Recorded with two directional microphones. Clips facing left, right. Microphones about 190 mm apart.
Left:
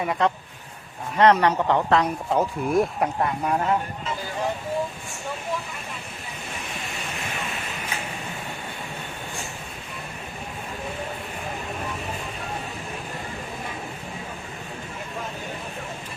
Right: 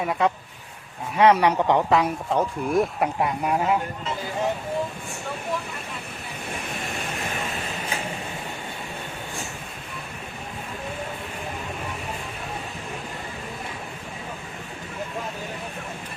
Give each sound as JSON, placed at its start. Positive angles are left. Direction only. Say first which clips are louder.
{"t": 0.0, "sound": "a woman's voice", "louder": "even", "side_deg": 0}
{"t": 2.3, "sound": "a woman's voice", "louder": "left 1 dB", "side_deg": 0}